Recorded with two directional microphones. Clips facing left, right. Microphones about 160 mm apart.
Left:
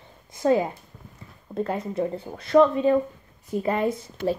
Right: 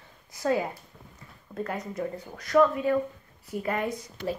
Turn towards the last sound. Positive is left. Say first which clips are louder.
# left 5 dB
turn(degrees=25)  # may be behind; listen again after turning